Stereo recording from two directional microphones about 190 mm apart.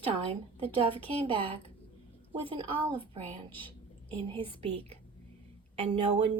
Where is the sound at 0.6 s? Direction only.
30° right (ahead or behind).